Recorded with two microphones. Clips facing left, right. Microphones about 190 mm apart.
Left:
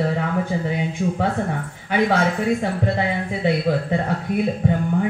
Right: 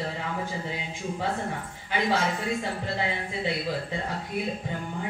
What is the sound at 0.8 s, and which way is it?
Speech, 60° left (ahead or behind).